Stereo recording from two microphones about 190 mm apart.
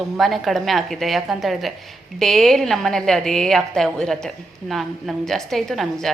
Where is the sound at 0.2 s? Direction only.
Centre (ahead or behind).